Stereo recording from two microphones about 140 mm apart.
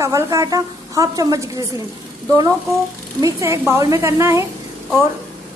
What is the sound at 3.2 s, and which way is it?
A woman's voice, 20° right (ahead or behind).